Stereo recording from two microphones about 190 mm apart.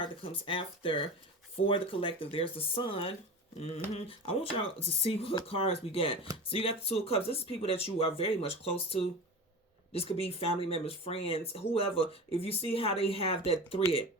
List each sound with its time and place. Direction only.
0.0 s speech: 30° left (ahead or behind)